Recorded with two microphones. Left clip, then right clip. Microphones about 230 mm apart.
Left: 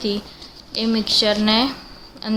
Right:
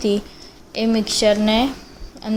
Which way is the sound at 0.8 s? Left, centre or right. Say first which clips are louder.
Even; centre.